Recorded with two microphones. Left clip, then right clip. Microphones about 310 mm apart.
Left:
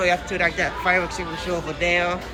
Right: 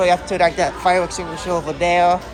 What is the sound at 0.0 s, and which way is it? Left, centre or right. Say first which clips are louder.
A woman's voice: right 5 dB; centre.